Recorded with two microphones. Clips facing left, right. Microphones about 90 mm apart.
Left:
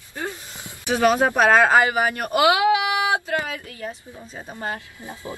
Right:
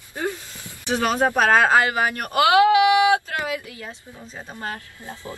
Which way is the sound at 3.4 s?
10° right (ahead or behind).